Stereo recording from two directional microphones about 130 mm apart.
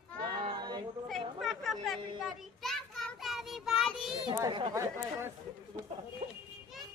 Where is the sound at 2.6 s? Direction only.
Centre (ahead or behind).